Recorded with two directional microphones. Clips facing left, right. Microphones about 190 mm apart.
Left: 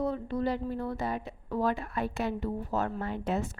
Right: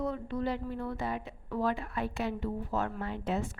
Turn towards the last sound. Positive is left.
turn(degrees=45)  # may be behind; listen again after turning